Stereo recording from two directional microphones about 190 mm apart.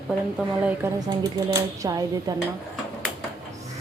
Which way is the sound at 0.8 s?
20° right (ahead or behind).